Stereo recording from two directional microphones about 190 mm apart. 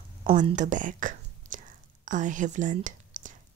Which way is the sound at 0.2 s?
35° right (ahead or behind).